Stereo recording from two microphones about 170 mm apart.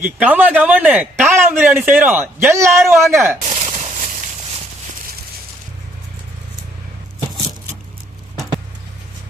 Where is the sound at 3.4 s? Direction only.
40° right (ahead or behind).